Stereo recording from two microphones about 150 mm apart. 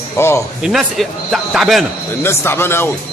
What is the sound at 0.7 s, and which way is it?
A man's voice, centre (ahead or behind).